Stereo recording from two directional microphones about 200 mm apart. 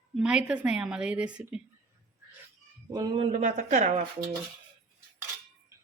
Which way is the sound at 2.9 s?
20° right (ahead or behind).